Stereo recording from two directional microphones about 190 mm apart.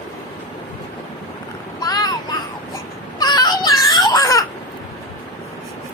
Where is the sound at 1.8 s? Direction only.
20° left (ahead or behind).